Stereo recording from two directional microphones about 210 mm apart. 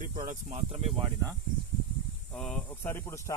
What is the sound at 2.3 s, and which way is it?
Speech, 5° left (ahead or behind).